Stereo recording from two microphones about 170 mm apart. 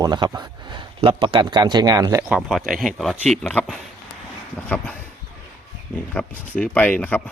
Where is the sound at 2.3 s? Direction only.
Centre (ahead or behind).